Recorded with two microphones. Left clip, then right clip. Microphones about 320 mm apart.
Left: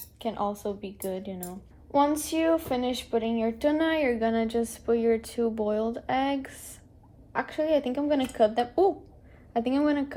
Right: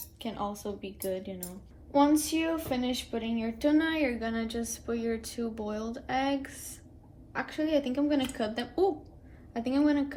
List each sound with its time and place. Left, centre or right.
0.2 s a woman's voice: left